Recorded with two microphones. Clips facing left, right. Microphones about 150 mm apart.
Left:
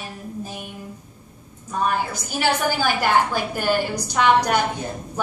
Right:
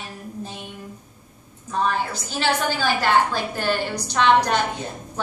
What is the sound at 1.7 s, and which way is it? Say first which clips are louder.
A woman's voice: even; 10° left (ahead or behind).